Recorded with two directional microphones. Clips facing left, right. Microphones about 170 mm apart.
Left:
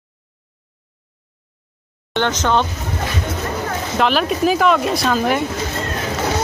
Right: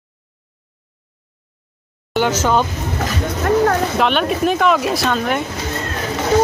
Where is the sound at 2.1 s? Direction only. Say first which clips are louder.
Right 2 dB; 10° right (ahead or behind).